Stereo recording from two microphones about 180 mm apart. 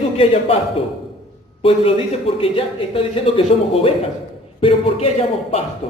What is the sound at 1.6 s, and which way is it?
A man's voice, 30° left (ahead or behind).